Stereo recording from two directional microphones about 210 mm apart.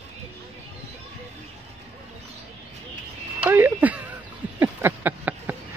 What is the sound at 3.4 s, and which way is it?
Speech, 10° right (ahead or behind).